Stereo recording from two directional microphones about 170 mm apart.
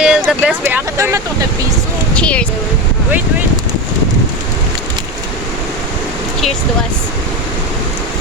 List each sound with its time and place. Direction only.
0.0 s vehicle: 5° right (ahead or behind)
0.9 s speech: 20° right (ahead or behind)
2.1 s speech: 5° left (ahead or behind)